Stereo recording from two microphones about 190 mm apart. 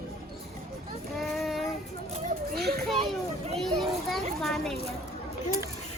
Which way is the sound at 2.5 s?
55° right (ahead or behind).